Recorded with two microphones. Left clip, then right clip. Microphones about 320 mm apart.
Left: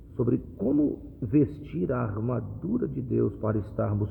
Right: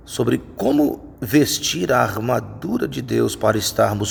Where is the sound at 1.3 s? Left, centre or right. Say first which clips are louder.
Right 9 dB; centre.